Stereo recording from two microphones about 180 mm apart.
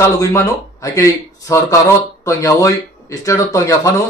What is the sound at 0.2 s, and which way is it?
Speech, 15° left (ahead or behind).